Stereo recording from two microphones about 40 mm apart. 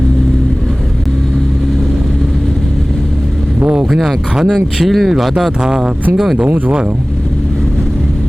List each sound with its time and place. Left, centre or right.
3.9 s speech: centre
4.4 s speech: centre
5.6 s speech: centre
6.3 s speech: right